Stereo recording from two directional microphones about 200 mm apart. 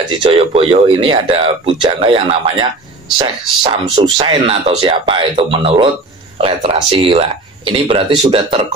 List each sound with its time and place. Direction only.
0.2 s speech: 30° right (ahead or behind)